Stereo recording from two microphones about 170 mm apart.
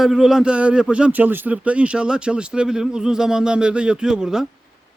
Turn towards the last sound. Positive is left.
turn(degrees=-5)  # may be behind; listen again after turning